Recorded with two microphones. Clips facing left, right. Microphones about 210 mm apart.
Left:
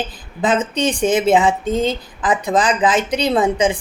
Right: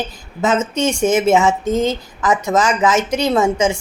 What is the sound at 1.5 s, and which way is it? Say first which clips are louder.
Speech: right 1 dB; 10° left (ahead or behind).